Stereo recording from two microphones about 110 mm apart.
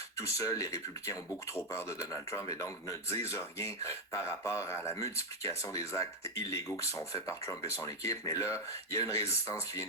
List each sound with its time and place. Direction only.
0.3 s speech: 30° left (ahead or behind)